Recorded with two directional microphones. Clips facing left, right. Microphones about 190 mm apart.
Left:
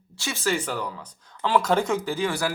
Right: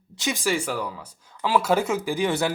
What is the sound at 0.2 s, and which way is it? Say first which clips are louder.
Speech: right 1 dB; 15° right (ahead or behind).